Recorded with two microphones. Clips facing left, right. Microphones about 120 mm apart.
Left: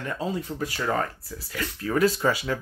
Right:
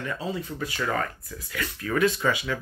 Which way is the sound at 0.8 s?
30° left (ahead or behind).